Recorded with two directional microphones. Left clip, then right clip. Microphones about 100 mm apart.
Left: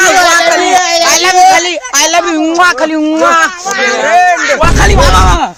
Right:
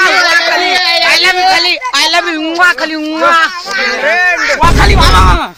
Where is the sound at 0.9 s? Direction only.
35° left (ahead or behind).